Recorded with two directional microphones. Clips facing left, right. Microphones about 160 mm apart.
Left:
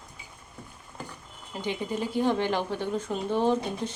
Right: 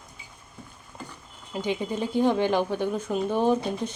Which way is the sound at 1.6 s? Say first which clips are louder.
Right 2 dB; 15° right (ahead or behind).